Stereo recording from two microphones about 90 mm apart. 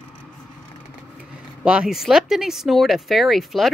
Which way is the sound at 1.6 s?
10° right (ahead or behind).